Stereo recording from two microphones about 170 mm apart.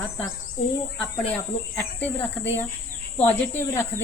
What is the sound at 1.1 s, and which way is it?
Speech, 10° left (ahead or behind).